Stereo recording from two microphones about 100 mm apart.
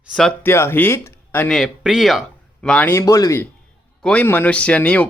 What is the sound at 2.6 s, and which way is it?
Speech, 10° left (ahead or behind).